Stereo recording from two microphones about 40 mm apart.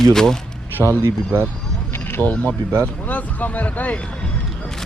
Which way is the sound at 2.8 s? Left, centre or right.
Left.